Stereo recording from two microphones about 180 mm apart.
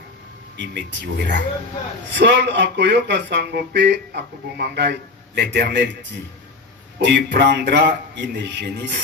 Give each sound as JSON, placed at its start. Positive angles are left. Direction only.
{"t": 0.5, "sound": "speech", "side_deg": -75}
{"t": 7.0, "sound": "speech", "side_deg": -75}